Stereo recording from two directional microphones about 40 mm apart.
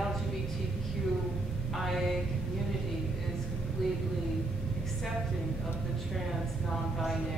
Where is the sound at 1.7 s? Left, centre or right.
Centre.